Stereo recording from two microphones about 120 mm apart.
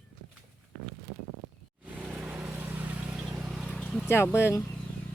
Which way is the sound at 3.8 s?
5° left (ahead or behind).